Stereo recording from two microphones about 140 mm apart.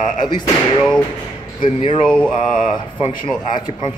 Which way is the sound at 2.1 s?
5° left (ahead or behind).